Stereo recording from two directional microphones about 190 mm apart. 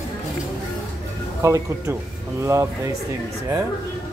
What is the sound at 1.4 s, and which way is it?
Speech, 15° right (ahead or behind).